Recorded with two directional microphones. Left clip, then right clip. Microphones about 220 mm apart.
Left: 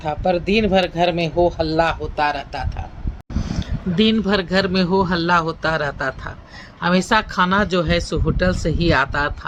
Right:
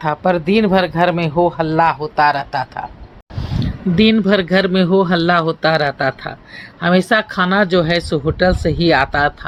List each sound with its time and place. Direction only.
0.0 s speech: 20° right (ahead or behind)
3.9 s speech: 15° right (ahead or behind)